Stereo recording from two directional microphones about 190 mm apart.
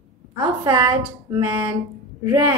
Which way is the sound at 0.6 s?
25° right (ahead or behind).